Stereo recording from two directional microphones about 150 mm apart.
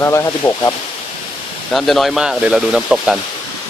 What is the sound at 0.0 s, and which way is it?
Speech, 20° left (ahead or behind).